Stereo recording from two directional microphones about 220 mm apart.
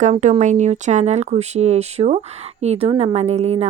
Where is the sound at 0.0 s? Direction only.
35° right (ahead or behind).